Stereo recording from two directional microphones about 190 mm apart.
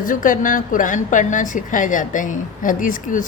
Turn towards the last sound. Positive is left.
turn(degrees=45)  # may be behind; listen again after turning